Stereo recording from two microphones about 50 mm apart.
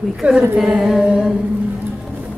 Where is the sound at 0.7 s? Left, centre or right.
Centre.